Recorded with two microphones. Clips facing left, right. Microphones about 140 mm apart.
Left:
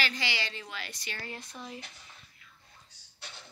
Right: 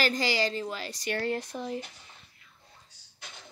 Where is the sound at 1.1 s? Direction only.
65° right (ahead or behind).